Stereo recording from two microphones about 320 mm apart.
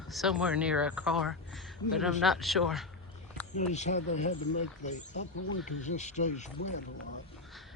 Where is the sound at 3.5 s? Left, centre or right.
Left.